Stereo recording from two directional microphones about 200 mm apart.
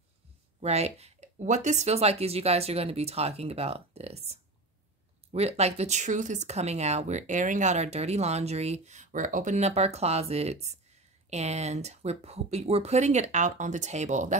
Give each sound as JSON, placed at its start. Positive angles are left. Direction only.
{"t": 0.6, "sound": "speech", "side_deg": -30}